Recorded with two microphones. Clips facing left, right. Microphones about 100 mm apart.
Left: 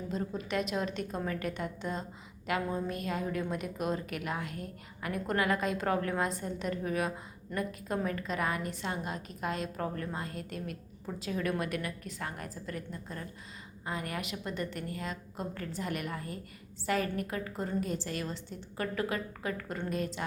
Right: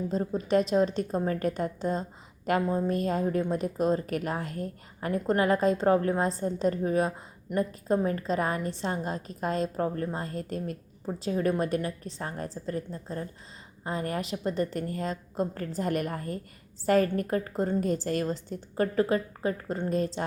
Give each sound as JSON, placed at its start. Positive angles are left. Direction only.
{"t": 0.1, "sound": "a woman's voice", "side_deg": -35}